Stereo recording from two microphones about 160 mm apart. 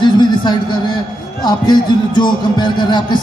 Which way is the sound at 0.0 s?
30° left (ahead or behind).